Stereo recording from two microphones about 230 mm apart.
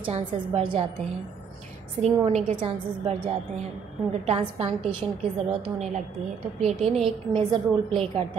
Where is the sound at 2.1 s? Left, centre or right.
Right.